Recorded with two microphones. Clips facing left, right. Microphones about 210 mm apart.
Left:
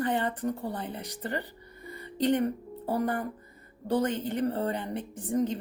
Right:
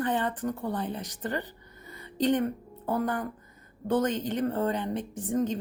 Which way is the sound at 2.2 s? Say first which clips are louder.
Even; 10° left (ahead or behind).